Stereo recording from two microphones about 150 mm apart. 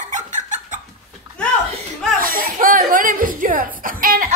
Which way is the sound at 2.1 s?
70° right (ahead or behind).